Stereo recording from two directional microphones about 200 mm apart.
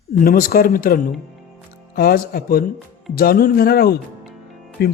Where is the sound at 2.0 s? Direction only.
50° left (ahead or behind).